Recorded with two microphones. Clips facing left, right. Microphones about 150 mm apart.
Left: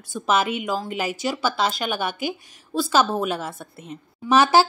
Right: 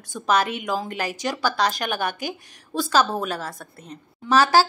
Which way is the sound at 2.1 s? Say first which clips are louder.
Left 3 dB; 45° right (ahead or behind).